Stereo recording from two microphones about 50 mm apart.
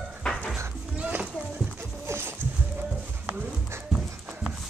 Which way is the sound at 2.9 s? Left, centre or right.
Right.